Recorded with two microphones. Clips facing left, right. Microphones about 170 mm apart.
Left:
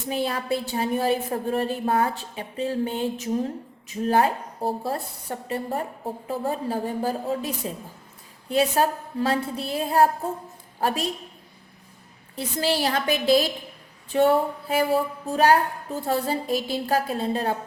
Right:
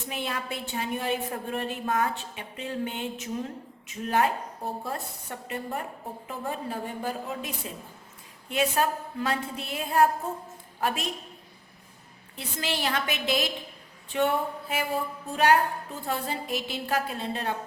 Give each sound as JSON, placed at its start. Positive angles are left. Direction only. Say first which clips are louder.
{"t": 0.1, "sound": "a woman's voice", "louder": "left 8 dB", "side_deg": 35}
{"t": 12.4, "sound": "a woman's voice", "louder": "left 7 dB", "side_deg": 35}